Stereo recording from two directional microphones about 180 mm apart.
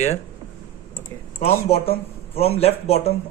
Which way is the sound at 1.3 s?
35° left (ahead or behind).